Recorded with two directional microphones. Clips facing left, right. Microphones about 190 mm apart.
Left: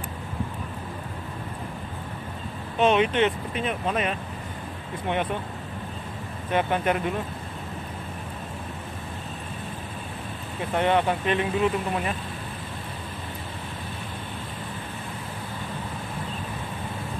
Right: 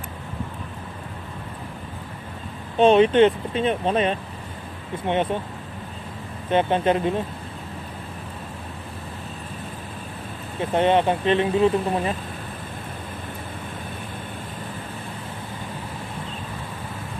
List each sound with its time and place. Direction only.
2.8 s speech: 30° right (ahead or behind)
6.5 s speech: 25° right (ahead or behind)
10.7 s speech: 20° right (ahead or behind)